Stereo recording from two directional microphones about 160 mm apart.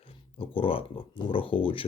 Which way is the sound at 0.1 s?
35° left (ahead or behind).